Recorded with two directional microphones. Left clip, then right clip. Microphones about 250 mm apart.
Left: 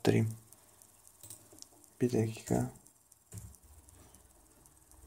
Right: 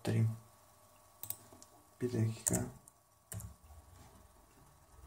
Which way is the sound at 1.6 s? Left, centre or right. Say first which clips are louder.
Left 7 dB; left.